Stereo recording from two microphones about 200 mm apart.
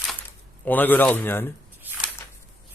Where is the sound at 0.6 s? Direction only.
10° left (ahead or behind).